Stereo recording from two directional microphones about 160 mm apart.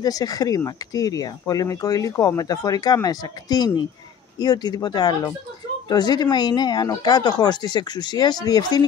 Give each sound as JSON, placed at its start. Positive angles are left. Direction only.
{"t": 0.0, "sound": "speech", "side_deg": 25}